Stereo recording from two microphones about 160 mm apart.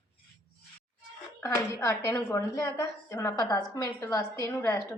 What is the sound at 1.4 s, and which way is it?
A woman's voice, 20° left (ahead or behind).